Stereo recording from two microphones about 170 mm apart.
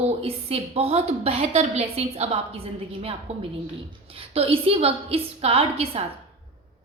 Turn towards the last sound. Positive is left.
turn(degrees=-35)  # may be behind; listen again after turning